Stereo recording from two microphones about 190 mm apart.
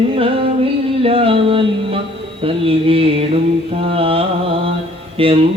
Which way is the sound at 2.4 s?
30° right (ahead or behind).